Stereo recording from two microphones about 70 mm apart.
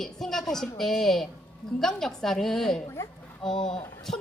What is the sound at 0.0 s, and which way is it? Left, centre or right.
A woman's voice, centre.